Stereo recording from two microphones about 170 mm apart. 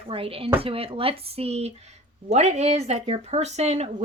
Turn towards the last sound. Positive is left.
turn(degrees=-40)  # may be behind; listen again after turning